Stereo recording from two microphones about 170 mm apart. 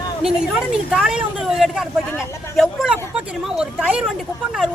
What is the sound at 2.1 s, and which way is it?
Speech, 15° left (ahead or behind).